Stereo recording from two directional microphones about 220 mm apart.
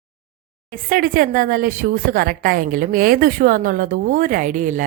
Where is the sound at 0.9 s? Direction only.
40° right (ahead or behind).